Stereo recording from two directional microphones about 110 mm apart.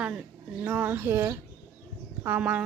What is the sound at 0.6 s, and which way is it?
A woman's voice, 15° right (ahead or behind).